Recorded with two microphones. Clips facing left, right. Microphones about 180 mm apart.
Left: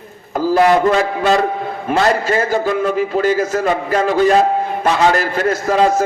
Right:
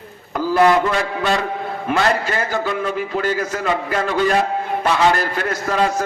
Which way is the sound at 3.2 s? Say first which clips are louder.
Left 6 dB; 45° left (ahead or behind).